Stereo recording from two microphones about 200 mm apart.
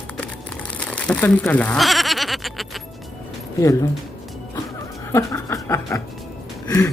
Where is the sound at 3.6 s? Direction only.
15° left (ahead or behind).